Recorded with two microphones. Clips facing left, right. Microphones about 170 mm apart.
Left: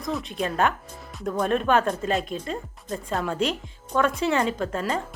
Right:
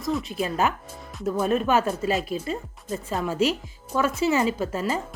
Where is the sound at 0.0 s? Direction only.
Centre (ahead or behind).